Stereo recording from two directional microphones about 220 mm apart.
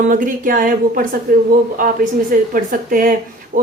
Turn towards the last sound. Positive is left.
turn(degrees=-40)  # may be behind; listen again after turning